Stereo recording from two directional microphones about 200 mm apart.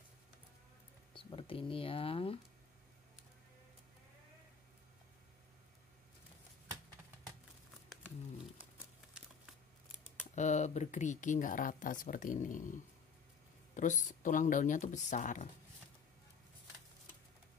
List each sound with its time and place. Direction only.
1.1 s speech: 25° left (ahead or behind)
10.3 s speech: 35° left (ahead or behind)
13.7 s speech: 40° left (ahead or behind)